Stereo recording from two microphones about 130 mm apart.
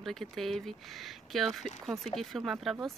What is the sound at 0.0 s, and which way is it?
Speech, 5° left (ahead or behind).